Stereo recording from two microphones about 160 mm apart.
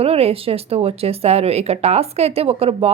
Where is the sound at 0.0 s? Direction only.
40° right (ahead or behind).